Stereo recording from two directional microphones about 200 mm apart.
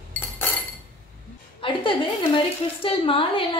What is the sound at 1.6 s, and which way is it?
A woman's voice, 25° left (ahead or behind).